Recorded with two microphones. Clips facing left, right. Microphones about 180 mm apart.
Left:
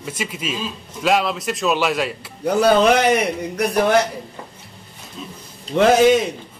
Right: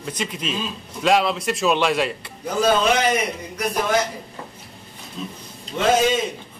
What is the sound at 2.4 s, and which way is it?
A man's voice, 60° left (ahead or behind).